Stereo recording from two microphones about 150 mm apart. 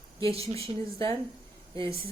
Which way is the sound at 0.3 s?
40° right (ahead or behind).